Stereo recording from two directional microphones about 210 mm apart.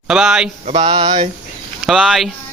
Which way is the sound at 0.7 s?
20° right (ahead or behind).